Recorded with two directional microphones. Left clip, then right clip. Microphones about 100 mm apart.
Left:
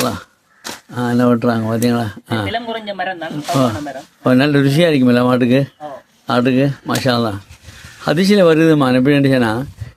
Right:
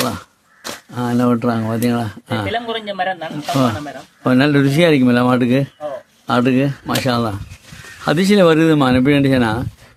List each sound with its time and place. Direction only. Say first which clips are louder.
0.9 s speech: left 2 dB; 15° left (ahead or behind)
2.5 s a man's voice: even; 40° right (ahead or behind)
3.3 s speech: left 3 dB; 10° left (ahead or behind)
8.0 s speech: left 1 dB; centre (ahead or behind)